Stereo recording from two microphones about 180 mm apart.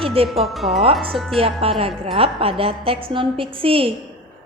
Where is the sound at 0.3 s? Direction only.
Centre (ahead or behind).